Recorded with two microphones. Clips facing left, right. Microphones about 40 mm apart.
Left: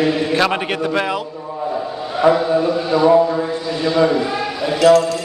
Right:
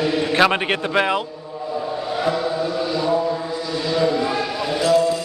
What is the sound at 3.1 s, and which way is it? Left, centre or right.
Speech, left.